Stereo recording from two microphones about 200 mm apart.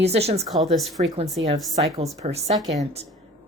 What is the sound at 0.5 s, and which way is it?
Speech, centre (ahead or behind).